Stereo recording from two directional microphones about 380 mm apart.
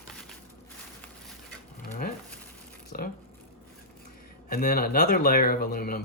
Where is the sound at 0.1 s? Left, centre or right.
Centre.